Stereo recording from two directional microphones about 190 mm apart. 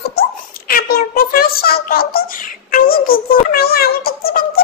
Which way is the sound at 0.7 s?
50° left (ahead or behind).